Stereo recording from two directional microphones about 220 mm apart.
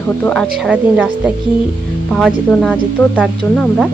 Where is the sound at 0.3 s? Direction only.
Centre (ahead or behind).